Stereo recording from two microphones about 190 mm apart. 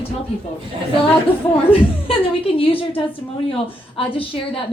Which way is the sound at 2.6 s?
30° left (ahead or behind).